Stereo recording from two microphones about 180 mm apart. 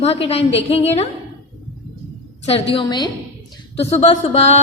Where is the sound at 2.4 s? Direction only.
30° left (ahead or behind).